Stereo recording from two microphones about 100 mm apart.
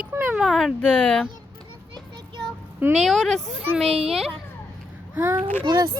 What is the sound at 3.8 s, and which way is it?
Speech, 90° right.